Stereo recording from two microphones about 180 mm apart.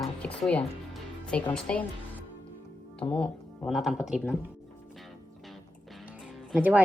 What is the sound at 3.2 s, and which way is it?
A woman's voice, 5° left (ahead or behind).